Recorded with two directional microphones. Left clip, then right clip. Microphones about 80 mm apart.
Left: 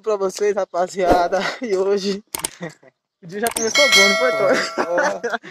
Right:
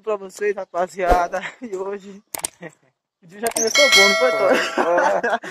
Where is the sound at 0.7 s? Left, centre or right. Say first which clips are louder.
Left 2 dB; left.